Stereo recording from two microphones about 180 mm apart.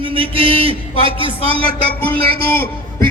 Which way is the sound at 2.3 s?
60° right (ahead or behind).